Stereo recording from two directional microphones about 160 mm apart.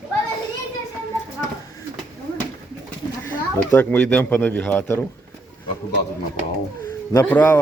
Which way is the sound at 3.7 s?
10° left (ahead or behind).